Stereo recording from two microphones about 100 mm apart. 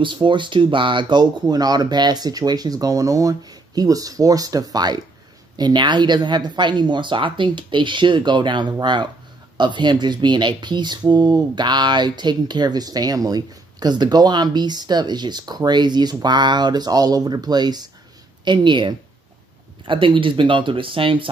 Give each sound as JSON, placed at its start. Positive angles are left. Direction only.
{"t": 0.0, "sound": "speech", "side_deg": -55}